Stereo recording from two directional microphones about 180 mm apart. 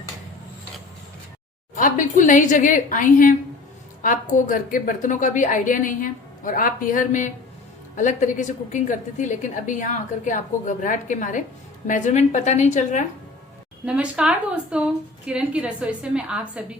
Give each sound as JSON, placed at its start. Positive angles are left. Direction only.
{"t": 1.7, "sound": "a woman's voice", "side_deg": 45}
{"t": 13.8, "sound": "a woman's voice", "side_deg": -5}